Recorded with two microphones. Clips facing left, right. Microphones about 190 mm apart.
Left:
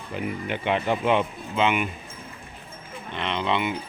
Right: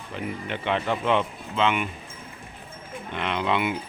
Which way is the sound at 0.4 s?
10° left (ahead or behind).